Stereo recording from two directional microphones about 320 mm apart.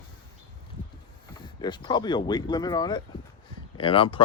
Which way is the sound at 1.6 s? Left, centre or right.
Centre.